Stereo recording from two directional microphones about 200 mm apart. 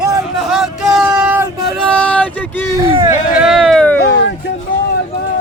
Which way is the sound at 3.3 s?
5° right (ahead or behind).